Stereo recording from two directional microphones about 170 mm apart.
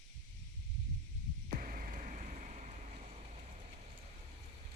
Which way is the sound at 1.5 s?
50° right (ahead or behind).